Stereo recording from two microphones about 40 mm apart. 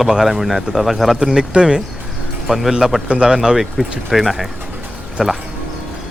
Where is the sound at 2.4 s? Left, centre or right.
Centre.